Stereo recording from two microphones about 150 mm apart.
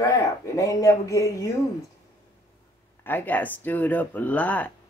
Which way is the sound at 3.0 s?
10° left (ahead or behind).